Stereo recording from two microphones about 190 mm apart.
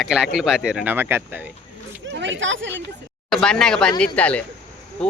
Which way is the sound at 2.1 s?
75° right (ahead or behind).